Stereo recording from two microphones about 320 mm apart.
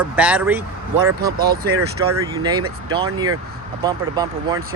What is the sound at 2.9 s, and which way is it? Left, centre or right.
Speech, centre.